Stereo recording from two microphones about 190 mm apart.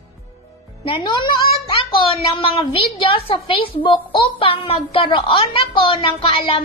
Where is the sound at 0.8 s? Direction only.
25° left (ahead or behind).